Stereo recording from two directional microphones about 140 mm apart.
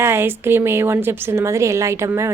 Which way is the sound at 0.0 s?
15° right (ahead or behind).